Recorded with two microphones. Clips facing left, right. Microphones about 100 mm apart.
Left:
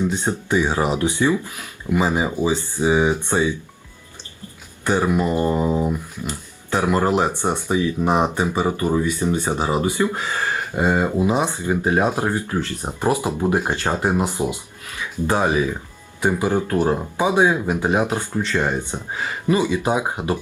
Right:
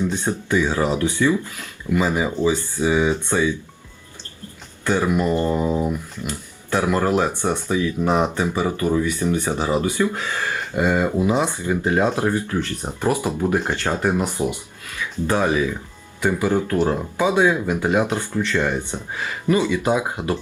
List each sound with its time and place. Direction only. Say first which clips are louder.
0.0 s speech: left 1 dB; 15° left (ahead or behind)
4.9 s speech: even; 15° left (ahead or behind)